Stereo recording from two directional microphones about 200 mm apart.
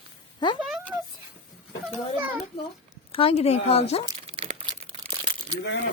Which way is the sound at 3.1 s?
30° left (ahead or behind).